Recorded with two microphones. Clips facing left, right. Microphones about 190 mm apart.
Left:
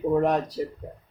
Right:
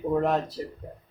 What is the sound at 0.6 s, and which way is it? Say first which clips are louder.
Speech: left 5 dB; 15° left (ahead or behind).